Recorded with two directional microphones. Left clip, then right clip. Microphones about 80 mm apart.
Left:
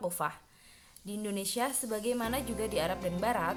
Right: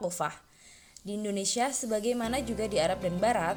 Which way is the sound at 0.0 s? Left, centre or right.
Right.